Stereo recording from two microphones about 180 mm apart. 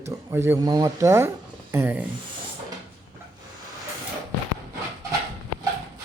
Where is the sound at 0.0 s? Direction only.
15° right (ahead or behind).